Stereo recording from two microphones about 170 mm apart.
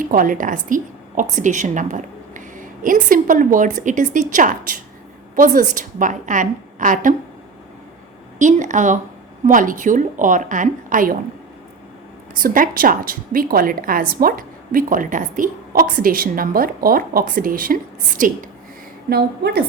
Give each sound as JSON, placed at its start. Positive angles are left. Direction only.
{"t": 0.0, "sound": "a woman's voice", "side_deg": -55}
{"t": 8.4, "sound": "a woman's voice", "side_deg": -45}
{"t": 12.4, "sound": "a woman's voice", "side_deg": -55}
{"t": 19.1, "sound": "a woman's voice", "side_deg": -70}